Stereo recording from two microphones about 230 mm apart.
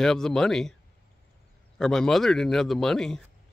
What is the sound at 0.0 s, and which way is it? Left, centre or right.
Speech, centre.